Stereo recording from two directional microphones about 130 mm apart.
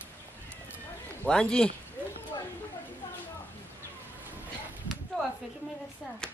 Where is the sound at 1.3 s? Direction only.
5° left (ahead or behind).